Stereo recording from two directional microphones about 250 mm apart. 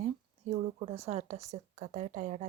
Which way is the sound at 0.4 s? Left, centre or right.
Right.